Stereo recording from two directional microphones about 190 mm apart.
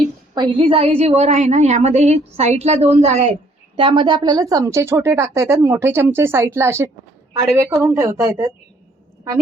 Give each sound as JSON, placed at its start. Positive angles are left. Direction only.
{"t": 0.3, "sound": "a woman's voice", "side_deg": -25}